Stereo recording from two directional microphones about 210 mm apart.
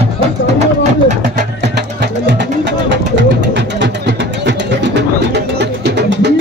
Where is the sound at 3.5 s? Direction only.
55° right (ahead or behind).